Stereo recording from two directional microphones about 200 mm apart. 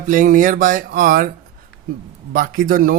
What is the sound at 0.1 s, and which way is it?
Speech, 40° right (ahead or behind).